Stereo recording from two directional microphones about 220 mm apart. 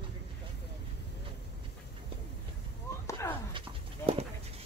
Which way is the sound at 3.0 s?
15° left (ahead or behind).